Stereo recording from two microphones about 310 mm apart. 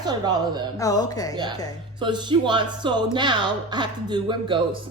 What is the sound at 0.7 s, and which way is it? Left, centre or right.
Laughter, centre.